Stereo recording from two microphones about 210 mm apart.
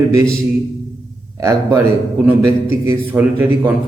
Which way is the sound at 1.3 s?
15° right (ahead or behind).